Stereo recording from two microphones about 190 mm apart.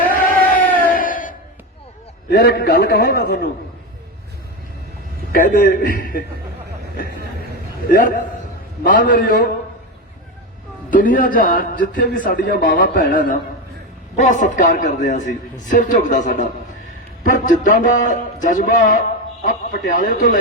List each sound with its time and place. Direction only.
0.3 s crowd: 45° left (ahead or behind)
2.3 s a man's voice: 55° left (ahead or behind)
5.3 s a man's voice: 50° left (ahead or behind)
7.9 s a man's voice: 45° left (ahead or behind)
10.9 s a man's voice: 45° left (ahead or behind)